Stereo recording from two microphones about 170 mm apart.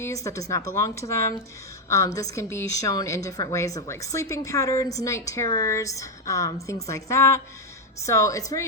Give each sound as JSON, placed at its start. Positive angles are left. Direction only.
{"t": 0.0, "sound": "a woman's voice", "side_deg": 15}